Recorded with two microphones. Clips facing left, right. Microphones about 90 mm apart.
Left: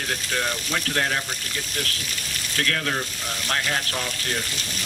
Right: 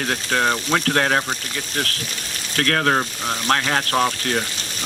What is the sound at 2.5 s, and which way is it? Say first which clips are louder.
Speech: right 7 dB; 55° right (ahead or behind).